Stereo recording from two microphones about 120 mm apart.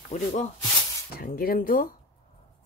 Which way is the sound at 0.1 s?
90° left.